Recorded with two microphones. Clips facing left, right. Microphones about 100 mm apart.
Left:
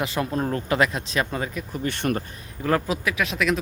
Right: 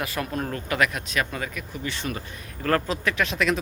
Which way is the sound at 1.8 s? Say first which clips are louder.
Left 7 dB; 55° left (ahead or behind).